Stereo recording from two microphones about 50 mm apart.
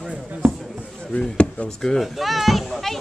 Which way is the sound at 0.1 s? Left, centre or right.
Right.